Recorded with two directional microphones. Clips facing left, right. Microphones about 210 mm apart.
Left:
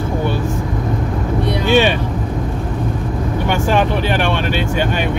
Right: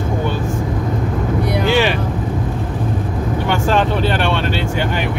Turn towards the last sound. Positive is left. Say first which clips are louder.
# even
turn(degrees=15)  # may be behind; listen again after turning